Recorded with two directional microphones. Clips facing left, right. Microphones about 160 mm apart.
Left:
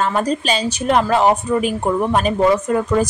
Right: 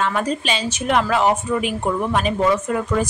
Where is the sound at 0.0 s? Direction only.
40° left (ahead or behind).